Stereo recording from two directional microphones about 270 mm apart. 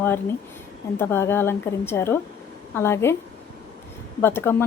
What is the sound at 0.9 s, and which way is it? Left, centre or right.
A woman's voice, centre.